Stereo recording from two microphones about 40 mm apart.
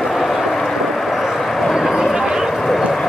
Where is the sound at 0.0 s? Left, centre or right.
Centre.